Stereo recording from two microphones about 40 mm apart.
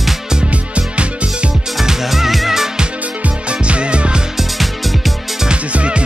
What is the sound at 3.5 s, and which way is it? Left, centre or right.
Music, right.